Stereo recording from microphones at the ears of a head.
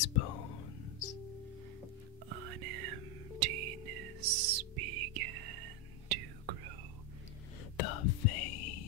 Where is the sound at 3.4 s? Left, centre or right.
Right.